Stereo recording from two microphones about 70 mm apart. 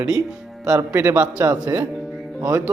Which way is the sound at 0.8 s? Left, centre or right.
Right.